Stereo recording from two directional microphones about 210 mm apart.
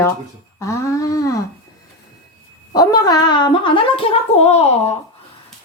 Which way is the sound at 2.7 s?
20° left (ahead or behind).